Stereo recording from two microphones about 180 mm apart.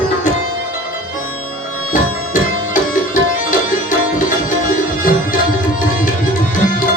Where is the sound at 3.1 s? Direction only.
45° left (ahead or behind).